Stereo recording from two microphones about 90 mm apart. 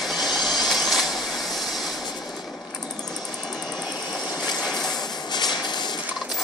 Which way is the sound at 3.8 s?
50° left (ahead or behind).